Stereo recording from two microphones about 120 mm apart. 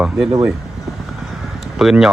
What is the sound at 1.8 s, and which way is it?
Speech, 5° right (ahead or behind).